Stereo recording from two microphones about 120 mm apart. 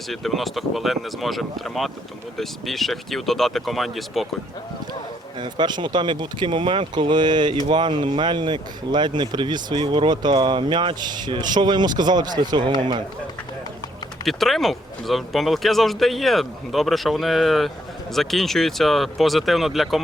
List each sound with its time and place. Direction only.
0.1 s speech: centre (ahead or behind)
5.4 s speech: 40° right (ahead or behind)
14.3 s speech: centre (ahead or behind)